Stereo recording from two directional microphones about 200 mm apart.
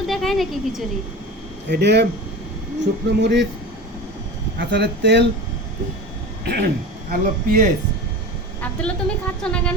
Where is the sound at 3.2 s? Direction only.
60° right (ahead or behind).